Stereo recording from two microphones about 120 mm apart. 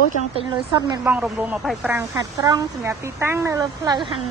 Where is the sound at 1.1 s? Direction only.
15° right (ahead or behind).